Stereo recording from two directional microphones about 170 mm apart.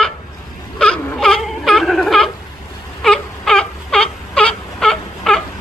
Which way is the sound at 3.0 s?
5° left (ahead or behind).